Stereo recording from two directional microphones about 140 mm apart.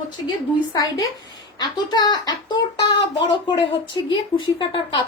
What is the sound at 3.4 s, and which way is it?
A woman's voice, 35° left (ahead or behind).